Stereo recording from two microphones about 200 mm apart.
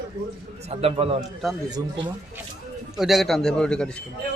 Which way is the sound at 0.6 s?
30° right (ahead or behind).